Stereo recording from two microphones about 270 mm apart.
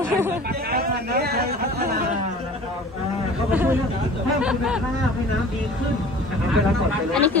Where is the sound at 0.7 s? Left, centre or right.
Right.